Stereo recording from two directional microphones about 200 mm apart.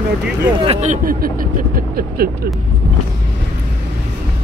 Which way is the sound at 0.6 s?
40° right (ahead or behind).